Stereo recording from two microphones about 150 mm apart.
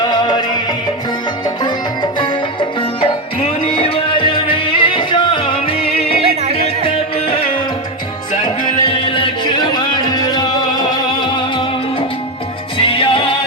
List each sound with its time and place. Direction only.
0.0 s music: 30° left (ahead or behind)
1.5 s music: 30° left (ahead or behind)